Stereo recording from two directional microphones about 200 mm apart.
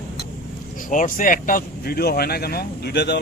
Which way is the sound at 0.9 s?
40° left (ahead or behind).